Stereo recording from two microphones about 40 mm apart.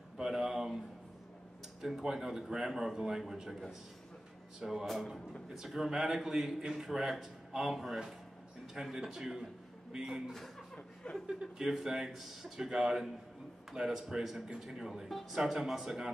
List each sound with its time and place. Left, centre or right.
0.2 s a man's voice: centre
1.8 s a man's voice: centre
4.6 s a man's voice: centre